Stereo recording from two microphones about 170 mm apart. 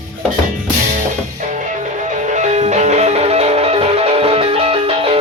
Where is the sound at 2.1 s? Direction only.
45° right (ahead or behind).